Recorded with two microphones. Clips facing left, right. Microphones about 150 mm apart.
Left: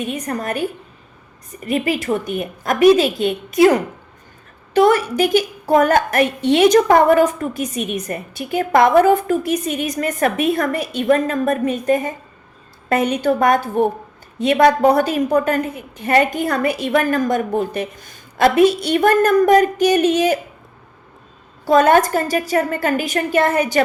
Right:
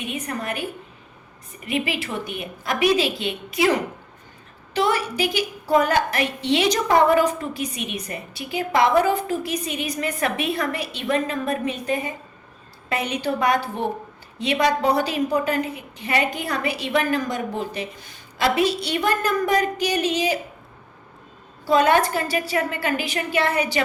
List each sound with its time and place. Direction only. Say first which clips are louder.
0.0 s a woman's voice: left 5 dB; 40° left (ahead or behind)
1.6 s a woman's voice: left 6 dB; 45° left (ahead or behind)
21.6 s a woman's voice: left 5 dB; 45° left (ahead or behind)